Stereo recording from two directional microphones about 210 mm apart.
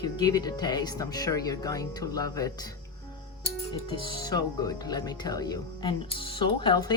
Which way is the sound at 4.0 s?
20° left (ahead or behind).